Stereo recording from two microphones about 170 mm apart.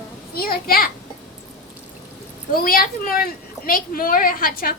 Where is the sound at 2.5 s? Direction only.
60° left (ahead or behind).